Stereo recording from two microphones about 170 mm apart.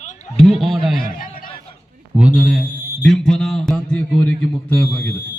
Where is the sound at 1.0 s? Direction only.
55° left (ahead or behind).